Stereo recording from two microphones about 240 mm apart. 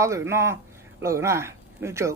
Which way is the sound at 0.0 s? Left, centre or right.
Centre.